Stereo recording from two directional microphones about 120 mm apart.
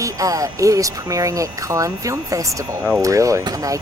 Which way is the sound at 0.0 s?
30° right (ahead or behind).